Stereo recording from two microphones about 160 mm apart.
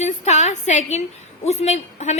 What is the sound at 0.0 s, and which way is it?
A woman's voice, 45° left (ahead or behind).